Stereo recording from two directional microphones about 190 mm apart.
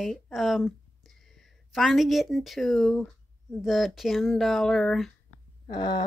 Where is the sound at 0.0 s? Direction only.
Centre (ahead or behind).